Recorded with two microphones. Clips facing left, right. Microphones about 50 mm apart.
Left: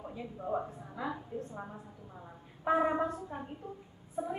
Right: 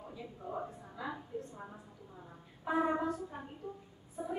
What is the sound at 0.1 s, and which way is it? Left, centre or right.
A woman's voice, left.